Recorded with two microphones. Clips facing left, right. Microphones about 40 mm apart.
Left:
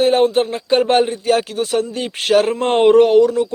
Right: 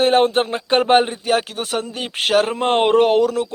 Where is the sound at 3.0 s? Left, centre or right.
Right.